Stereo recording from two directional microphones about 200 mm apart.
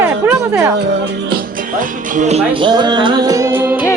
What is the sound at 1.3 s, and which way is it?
Speech, 40° right (ahead or behind).